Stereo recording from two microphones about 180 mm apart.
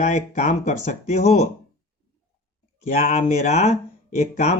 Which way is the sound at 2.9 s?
40° left (ahead or behind).